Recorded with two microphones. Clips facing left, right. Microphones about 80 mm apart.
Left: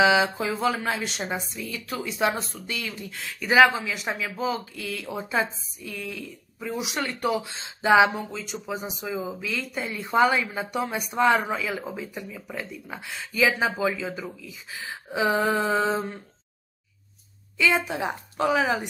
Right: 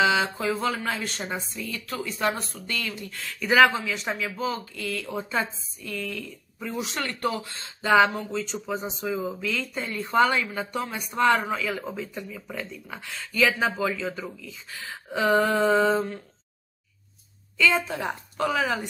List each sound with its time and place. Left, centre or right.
0.0 s speech: centre
3.3 s speech: centre
17.6 s speech: centre